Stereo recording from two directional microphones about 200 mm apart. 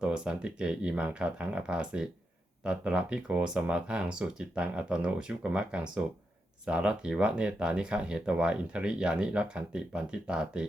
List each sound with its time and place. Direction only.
0.0 s speech: 5° right (ahead or behind)